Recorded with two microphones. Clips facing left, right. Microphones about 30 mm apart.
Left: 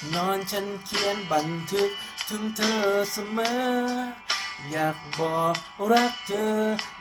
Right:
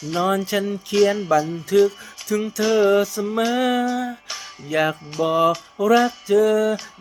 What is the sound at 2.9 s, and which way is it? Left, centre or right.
Music, right.